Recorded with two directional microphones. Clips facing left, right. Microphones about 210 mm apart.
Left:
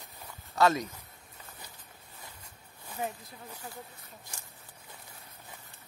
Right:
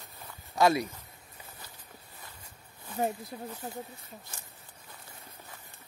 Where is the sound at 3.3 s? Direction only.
40° right (ahead or behind).